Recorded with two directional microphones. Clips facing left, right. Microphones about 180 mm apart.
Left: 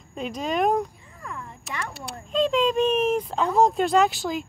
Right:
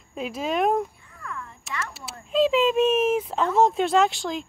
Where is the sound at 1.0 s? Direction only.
20° left (ahead or behind).